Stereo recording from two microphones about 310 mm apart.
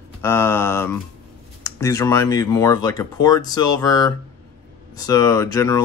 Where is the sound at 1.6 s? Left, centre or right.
Centre.